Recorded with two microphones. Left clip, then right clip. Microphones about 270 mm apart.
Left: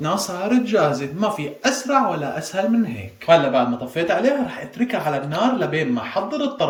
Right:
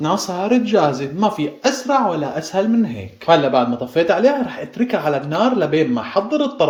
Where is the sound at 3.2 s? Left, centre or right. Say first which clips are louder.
Right 1 dB; centre.